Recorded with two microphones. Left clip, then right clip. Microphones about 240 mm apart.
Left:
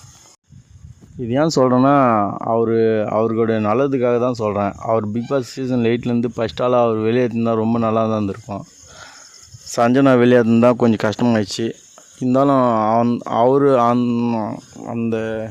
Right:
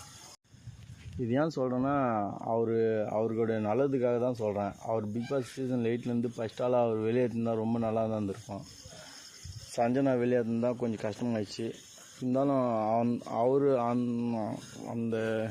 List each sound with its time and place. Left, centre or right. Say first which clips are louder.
1.2 s speech: left 14 dB; left
9.7 s speech: left 15 dB; left
15.2 s speech: left 8 dB; left